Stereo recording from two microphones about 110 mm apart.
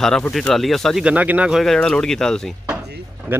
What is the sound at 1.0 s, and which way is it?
Speech, 10° right (ahead or behind).